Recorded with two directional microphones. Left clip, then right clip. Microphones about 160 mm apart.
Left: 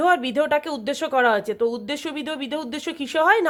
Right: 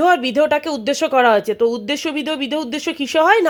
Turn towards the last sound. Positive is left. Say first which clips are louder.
# right 5 dB
turn(degrees=-35)  # may be behind; listen again after turning